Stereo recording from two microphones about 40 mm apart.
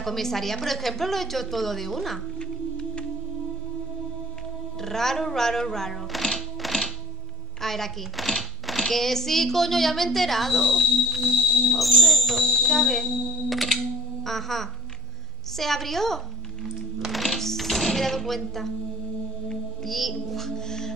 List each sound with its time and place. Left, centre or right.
0.0 s a woman's voice: centre
2.4 s music: centre
4.8 s a child's voice: centre
6.6 s music: centre
7.6 s a child's voice: centre
12.5 s a sound: centre
14.2 s a child's voice: centre
17.1 s music: centre